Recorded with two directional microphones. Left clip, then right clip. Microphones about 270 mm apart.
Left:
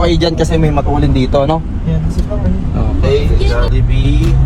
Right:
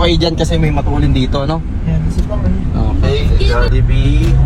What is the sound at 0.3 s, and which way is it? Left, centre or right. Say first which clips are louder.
Speech: left 3 dB; centre.